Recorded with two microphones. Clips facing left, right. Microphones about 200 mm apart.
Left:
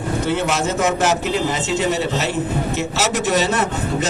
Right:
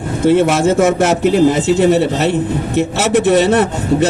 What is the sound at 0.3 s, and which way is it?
A man's voice, 55° right (ahead or behind).